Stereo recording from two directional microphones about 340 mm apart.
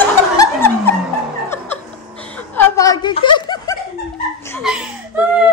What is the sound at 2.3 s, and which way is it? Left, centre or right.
Snicker, centre.